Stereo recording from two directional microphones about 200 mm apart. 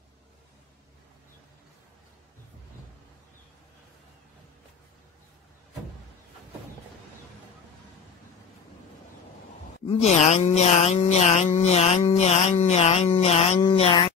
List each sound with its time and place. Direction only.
9.8 s speech: 30° left (ahead or behind)